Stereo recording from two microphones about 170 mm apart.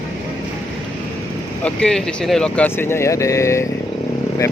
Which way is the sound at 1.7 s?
5° left (ahead or behind).